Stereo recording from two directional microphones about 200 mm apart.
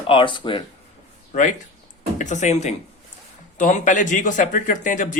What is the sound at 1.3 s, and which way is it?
Speech, 40° left (ahead or behind).